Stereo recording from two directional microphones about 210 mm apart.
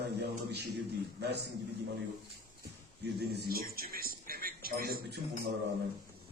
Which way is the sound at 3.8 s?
45° right (ahead or behind).